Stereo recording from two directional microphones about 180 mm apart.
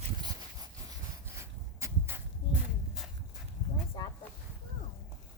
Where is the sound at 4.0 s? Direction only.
25° left (ahead or behind).